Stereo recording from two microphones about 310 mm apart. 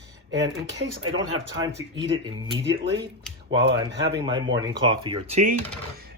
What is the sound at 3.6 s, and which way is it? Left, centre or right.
Speech, right.